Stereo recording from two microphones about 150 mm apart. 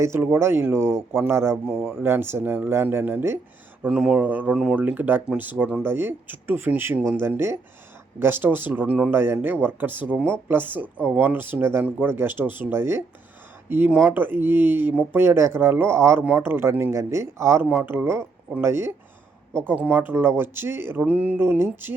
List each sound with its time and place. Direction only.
0.0 s speech: 15° right (ahead or behind)
1.7 s speech: centre (ahead or behind)
2.0 s speech: 15° right (ahead or behind)